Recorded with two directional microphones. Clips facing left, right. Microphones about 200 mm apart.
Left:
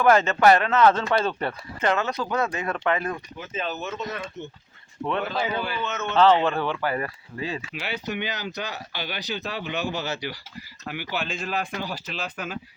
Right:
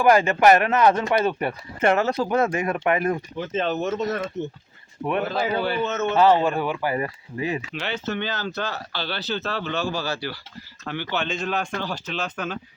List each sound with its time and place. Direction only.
0.0 s speech: 10° right (ahead or behind)
1.8 s a man's voice: 30° right (ahead or behind)
3.9 s speech: 45° right (ahead or behind)
5.2 s a man's voice: 35° right (ahead or behind)
6.1 s speech: 10° right (ahead or behind)
7.7 s speech: 10° left (ahead or behind)
10.8 s speech: 10° left (ahead or behind)